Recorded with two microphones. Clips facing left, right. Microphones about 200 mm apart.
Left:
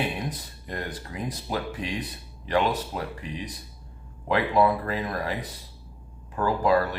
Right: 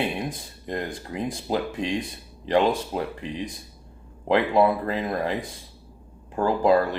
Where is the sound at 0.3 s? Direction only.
25° right (ahead or behind).